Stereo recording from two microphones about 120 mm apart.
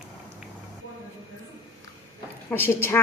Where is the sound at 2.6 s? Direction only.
20° left (ahead or behind).